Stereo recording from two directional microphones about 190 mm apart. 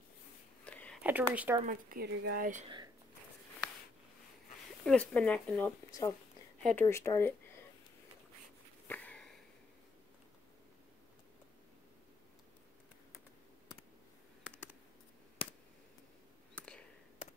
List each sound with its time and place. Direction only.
0.7 s a sound: 5° left (ahead or behind)
1.0 s speech: 10° right (ahead or behind)
1.6 s speech: 45° right (ahead or behind)
4.8 s speech: 5° left (ahead or behind)
5.9 s speech: 20° left (ahead or behind)
6.6 s speech: 5° left (ahead or behind)
8.8 s sniff: 10° left (ahead or behind)
16.5 s a sound: 5° left (ahead or behind)